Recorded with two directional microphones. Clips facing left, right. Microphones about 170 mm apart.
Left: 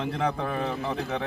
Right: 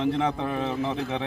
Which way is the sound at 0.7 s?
25° right (ahead or behind).